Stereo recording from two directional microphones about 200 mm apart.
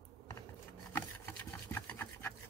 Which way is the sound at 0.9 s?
10° left (ahead or behind).